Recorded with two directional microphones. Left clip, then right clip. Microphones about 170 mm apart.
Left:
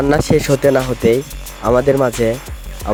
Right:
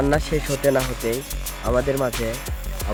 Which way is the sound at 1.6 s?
55° left (ahead or behind).